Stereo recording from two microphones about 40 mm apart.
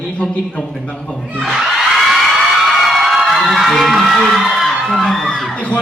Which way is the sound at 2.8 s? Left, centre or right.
Centre.